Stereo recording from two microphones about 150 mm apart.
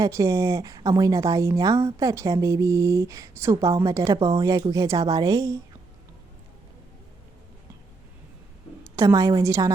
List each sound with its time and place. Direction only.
0.0 s speech: 20° right (ahead or behind)
8.8 s a woman's voice: 20° right (ahead or behind)